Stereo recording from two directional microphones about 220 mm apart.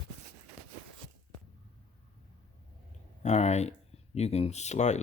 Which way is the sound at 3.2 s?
30° left (ahead or behind).